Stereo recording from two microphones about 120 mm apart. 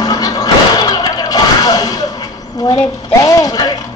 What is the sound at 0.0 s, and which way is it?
Music, 30° left (ahead or behind).